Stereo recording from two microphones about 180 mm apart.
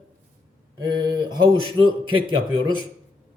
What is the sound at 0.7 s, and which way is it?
A man's voice, 20° right (ahead or behind).